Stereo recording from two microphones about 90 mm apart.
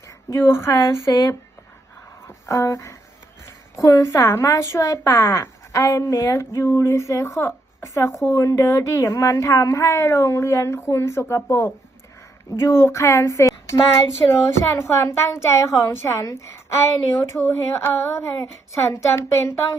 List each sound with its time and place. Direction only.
0.3 s speech: 30° left (ahead or behind)
2.2 s a sound: 35° left (ahead or behind)
3.4 s a woman's voice: 35° left (ahead or behind)